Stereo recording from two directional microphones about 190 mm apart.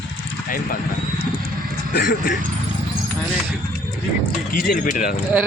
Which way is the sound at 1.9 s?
50° left (ahead or behind).